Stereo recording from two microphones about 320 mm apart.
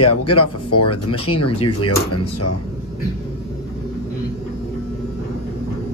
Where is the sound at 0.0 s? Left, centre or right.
Left.